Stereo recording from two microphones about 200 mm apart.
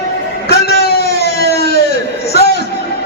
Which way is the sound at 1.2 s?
55° left (ahead or behind).